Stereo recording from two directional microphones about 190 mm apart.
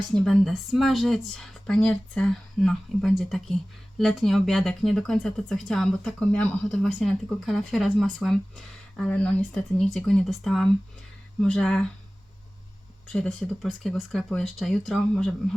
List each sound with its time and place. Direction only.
0.3 s speech: centre (ahead or behind)
13.1 s speech: 5° left (ahead or behind)